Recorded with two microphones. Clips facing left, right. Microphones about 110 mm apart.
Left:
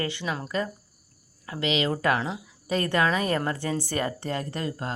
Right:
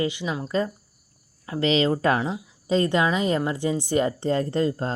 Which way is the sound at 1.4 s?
30° right (ahead or behind).